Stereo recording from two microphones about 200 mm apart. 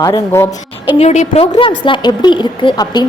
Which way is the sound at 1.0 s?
30° left (ahead or behind).